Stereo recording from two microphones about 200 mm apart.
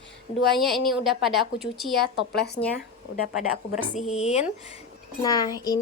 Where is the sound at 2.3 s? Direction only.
55° left (ahead or behind).